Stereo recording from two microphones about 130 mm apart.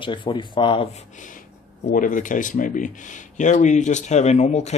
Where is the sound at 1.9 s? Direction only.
90° left.